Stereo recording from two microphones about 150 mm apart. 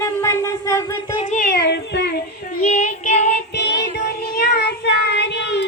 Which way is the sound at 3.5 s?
90° left.